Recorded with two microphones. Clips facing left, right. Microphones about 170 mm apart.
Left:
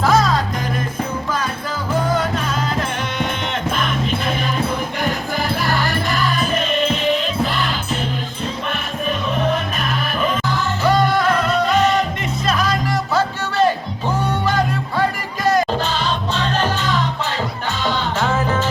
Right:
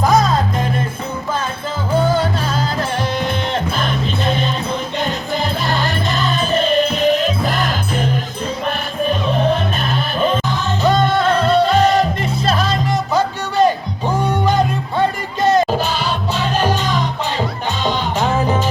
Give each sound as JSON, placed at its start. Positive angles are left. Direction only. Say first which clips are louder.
{"t": 0.0, "sound": "music", "louder": "right 1 dB", "side_deg": -20}
{"t": 2.0, "sound": "music", "louder": "right 2 dB", "side_deg": -30}
{"t": 3.8, "sound": "music", "louder": "right 1 dB", "side_deg": -30}
{"t": 9.0, "sound": "music", "louder": "right 3 dB", "side_deg": -30}
{"t": 15.8, "sound": "music", "louder": "right 1 dB", "side_deg": -10}